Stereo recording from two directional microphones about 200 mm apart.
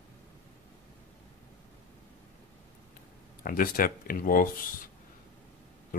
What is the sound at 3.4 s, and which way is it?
Speech, 45° left (ahead or behind).